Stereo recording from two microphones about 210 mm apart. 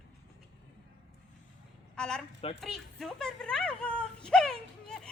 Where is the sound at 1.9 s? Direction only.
5° left (ahead or behind).